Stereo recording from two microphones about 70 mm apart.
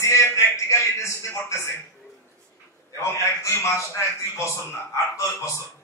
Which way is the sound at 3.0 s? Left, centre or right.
Left.